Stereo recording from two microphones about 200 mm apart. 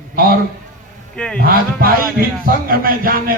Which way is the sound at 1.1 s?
5° left (ahead or behind).